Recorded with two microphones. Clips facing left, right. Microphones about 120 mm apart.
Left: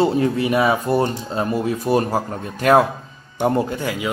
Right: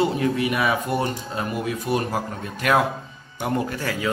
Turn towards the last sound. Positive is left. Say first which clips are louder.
# left 2 dB
turn(degrees=20)  # may be behind; listen again after turning